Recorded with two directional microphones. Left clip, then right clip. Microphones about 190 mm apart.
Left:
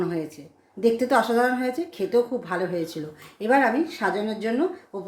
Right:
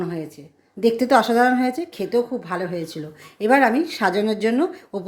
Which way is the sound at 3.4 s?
35° right (ahead or behind).